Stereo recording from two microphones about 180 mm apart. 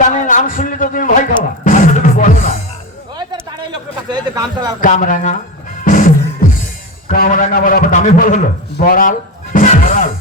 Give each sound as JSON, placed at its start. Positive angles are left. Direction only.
{"t": 0.1, "sound": "a man's voice", "side_deg": 45}
{"t": 1.6, "sound": "music", "side_deg": 45}
{"t": 3.2, "sound": "a sound", "side_deg": -25}
{"t": 4.8, "sound": "a man's voice", "side_deg": 45}
{"t": 5.8, "sound": "music", "side_deg": 45}
{"t": 7.1, "sound": "a man's voice", "side_deg": 50}
{"t": 8.8, "sound": "a sound", "side_deg": 50}